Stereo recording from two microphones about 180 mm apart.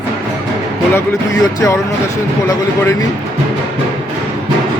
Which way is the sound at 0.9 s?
20° left (ahead or behind).